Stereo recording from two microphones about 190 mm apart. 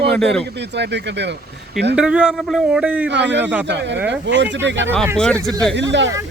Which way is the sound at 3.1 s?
65° right (ahead or behind).